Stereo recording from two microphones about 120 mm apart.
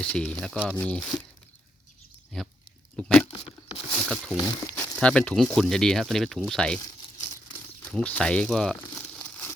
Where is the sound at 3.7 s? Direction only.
45° left (ahead or behind).